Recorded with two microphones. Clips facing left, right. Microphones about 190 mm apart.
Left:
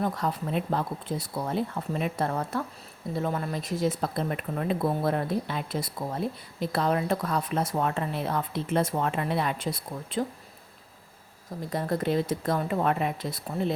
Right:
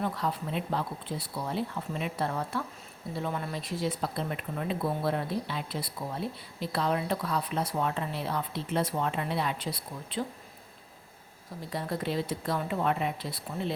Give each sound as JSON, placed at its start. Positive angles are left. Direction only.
{"t": 0.0, "sound": "speech", "side_deg": 45}
{"t": 11.7, "sound": "speech", "side_deg": 50}